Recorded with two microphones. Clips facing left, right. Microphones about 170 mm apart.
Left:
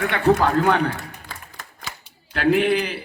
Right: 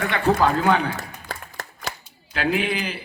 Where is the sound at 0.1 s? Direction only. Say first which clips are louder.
Left 2 dB; 60° left (ahead or behind).